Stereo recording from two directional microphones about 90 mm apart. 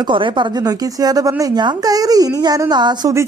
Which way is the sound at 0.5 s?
45° right (ahead or behind).